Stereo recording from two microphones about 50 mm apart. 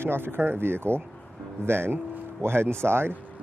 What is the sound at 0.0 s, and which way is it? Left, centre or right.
Speech, right.